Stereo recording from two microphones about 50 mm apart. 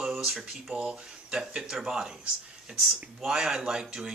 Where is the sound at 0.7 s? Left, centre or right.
Centre.